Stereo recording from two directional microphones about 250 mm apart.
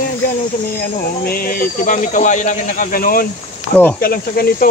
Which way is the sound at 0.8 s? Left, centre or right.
Left.